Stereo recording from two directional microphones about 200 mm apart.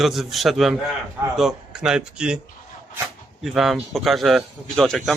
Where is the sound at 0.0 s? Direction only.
Centre (ahead or behind).